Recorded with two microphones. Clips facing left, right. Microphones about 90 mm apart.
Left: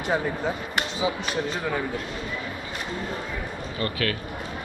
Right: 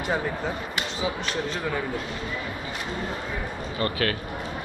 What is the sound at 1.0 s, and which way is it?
Speech, 20° left (ahead or behind).